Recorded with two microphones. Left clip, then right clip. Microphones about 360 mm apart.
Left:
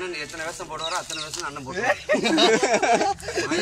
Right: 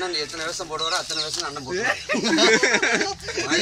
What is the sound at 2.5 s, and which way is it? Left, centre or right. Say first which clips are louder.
Speech: right 1 dB; centre.